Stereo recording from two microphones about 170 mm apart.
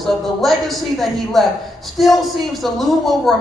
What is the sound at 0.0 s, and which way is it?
A man's voice, centre (ahead or behind).